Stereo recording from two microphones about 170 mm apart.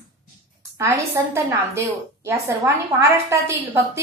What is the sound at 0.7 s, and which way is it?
A woman's voice, 15° right (ahead or behind).